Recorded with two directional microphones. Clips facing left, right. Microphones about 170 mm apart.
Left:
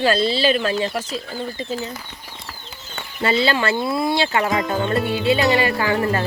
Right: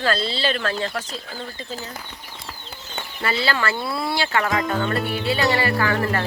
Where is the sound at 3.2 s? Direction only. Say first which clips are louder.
Left 5 dB; 20° left (ahead or behind).